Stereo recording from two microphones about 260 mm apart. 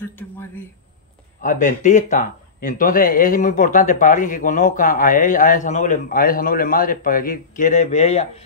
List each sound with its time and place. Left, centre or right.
1.4 s speech: left